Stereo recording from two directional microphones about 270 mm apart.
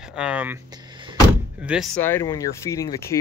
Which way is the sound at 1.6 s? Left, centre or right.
Centre.